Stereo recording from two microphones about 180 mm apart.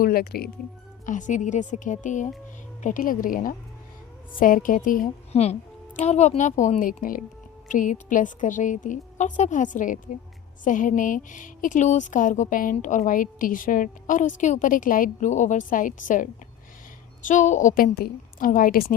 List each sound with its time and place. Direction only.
0.0 s speech: 55° left (ahead or behind)
1.0 s a woman's voice: 45° left (ahead or behind)
5.3 s a woman's voice: 35° left (ahead or behind); by 18.9 s 55° left (ahead or behind)